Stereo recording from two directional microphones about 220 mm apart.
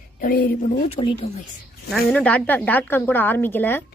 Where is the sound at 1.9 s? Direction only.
5° left (ahead or behind).